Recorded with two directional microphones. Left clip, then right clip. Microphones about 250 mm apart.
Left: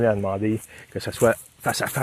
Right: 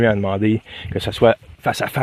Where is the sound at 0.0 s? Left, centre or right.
Right.